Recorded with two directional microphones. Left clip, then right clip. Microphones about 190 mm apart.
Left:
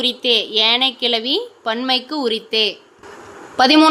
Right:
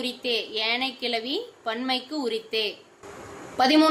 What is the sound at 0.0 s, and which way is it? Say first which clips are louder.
A woman's voice: left 11 dB; 25° left (ahead or behind).